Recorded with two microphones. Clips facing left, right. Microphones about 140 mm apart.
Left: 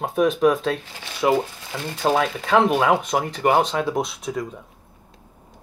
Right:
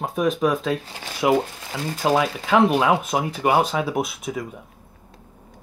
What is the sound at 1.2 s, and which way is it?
Speech, 15° right (ahead or behind).